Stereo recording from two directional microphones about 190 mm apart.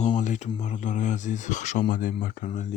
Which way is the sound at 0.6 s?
40° left (ahead or behind).